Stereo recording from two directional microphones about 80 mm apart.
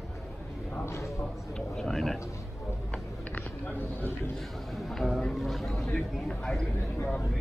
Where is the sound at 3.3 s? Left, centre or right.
Left.